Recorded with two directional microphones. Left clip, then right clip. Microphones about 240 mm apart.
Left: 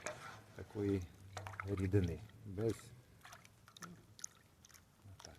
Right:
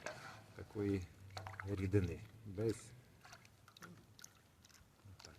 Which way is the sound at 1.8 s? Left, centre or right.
Left.